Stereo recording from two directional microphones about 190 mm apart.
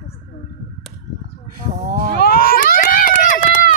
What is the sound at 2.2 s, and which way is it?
Run, 50° left (ahead or behind).